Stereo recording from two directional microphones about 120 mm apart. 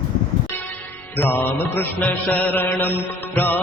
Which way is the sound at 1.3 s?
15° left (ahead or behind).